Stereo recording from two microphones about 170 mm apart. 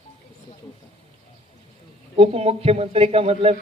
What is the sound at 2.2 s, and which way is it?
Speech, 35° right (ahead or behind).